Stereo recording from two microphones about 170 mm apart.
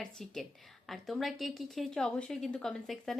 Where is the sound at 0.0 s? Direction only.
Centre (ahead or behind).